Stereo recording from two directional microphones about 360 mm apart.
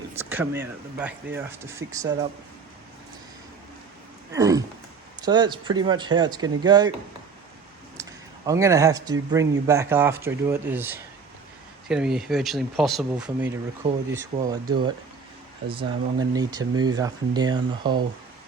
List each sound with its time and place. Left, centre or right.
0.1 s speech: centre
4.3 s a sound: centre
5.2 s speech: centre
8.0 s a sound: centre
8.4 s speech: centre
15.6 s speech: right
16.1 s speech: centre